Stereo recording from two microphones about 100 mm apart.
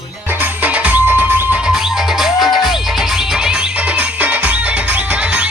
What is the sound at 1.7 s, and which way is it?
Music, 5° right (ahead or behind).